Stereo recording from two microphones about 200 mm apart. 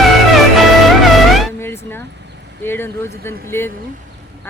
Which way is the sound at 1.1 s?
Centre (ahead or behind).